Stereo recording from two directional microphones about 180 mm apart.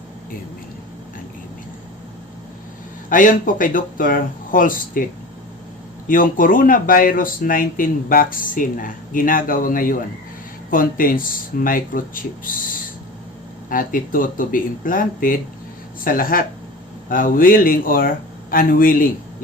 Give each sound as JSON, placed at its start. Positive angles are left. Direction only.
{"t": 3.1, "sound": "speech", "side_deg": 50}
{"t": 6.1, "sound": "speech", "side_deg": 50}
{"t": 13.7, "sound": "speech", "side_deg": 50}